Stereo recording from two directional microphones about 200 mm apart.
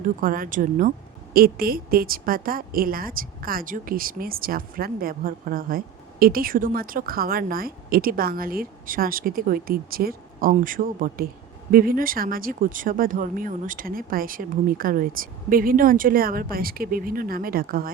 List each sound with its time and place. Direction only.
0.0 s a woman's voice: 45° right (ahead or behind)